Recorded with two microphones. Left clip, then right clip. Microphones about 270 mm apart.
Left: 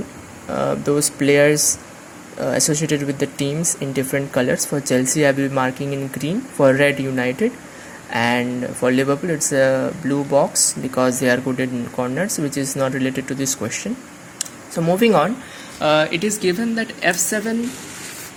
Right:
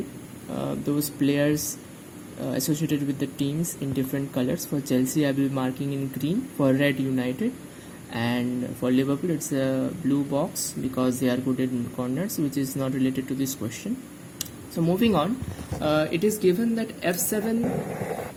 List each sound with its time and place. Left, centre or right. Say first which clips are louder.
0.9 s speech: left 8 dB; centre
14.8 s a woman's voice: left 8 dB; centre